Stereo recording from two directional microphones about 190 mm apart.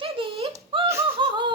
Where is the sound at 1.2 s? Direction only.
25° right (ahead or behind).